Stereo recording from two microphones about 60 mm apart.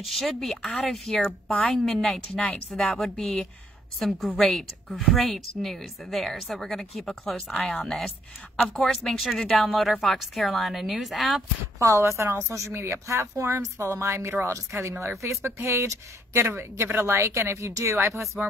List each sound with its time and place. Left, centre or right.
0.0 s speech: centre
1.1 s speech: centre
1.7 s a woman's voice: centre
11.8 s speech: right
12.7 s speech: right